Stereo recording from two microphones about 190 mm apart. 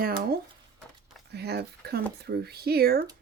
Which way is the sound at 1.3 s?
60° right (ahead or behind).